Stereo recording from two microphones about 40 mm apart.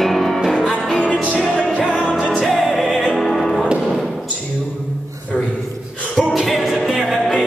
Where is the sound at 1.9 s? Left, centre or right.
Left.